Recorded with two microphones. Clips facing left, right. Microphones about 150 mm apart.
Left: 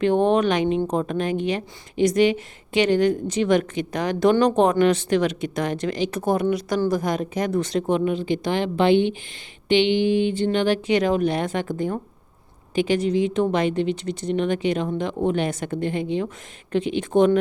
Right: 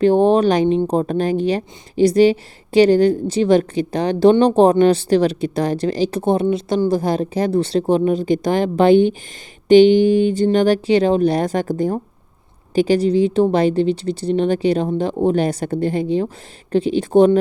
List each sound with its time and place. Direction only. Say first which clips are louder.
0.0 s a woman's voice: right 5 dB; 35° right (ahead or behind)